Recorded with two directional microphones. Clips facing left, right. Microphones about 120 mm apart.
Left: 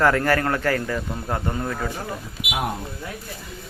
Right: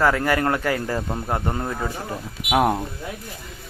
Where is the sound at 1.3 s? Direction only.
20° right (ahead or behind).